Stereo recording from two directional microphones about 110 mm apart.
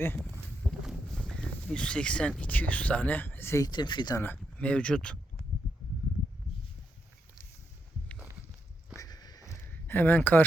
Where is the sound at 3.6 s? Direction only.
40° left (ahead or behind).